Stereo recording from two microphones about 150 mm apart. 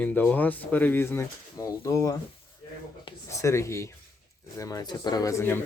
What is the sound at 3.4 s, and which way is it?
Speech, 20° left (ahead or behind).